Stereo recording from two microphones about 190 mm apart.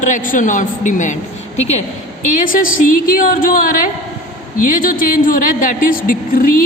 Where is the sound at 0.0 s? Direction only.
45° left (ahead or behind).